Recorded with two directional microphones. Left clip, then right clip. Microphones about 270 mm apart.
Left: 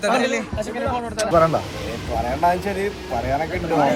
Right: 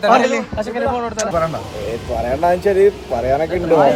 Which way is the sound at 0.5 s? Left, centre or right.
Right.